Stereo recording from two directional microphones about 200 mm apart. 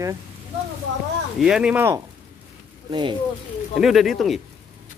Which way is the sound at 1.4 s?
5° right (ahead or behind).